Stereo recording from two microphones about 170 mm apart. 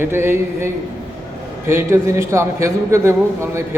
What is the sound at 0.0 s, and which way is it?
A man's voice, 15° right (ahead or behind).